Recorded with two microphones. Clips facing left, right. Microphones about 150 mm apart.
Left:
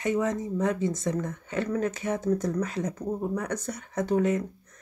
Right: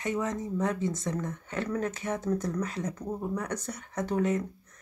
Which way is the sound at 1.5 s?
40° left (ahead or behind).